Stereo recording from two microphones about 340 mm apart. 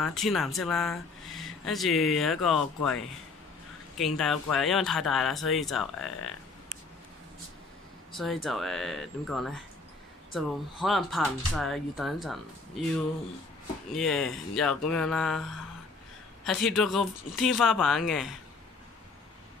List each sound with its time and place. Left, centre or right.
0.0 s speech: centre
4.0 s speech: centre
8.1 s speech: centre